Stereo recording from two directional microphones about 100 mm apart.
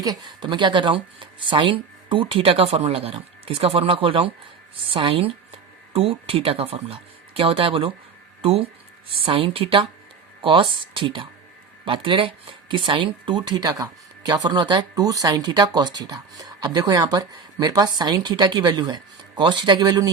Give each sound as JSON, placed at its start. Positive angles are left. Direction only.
{"t": 0.0, "sound": "speech", "side_deg": -45}
{"t": 9.2, "sound": "speech", "side_deg": -65}